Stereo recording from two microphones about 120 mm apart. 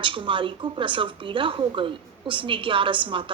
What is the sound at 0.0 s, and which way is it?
Speech, 45° right (ahead or behind).